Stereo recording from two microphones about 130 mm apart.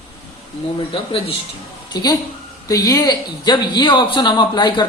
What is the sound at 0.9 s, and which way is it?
Speech, 40° left (ahead or behind).